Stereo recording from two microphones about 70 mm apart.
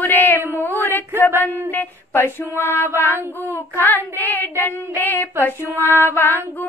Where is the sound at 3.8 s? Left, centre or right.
Left.